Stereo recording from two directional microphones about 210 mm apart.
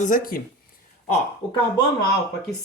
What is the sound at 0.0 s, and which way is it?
Speech, 40° left (ahead or behind).